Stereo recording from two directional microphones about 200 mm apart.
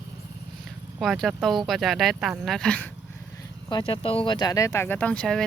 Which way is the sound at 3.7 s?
25° left (ahead or behind).